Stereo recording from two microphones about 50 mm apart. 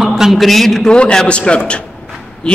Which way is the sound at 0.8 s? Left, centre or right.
Centre.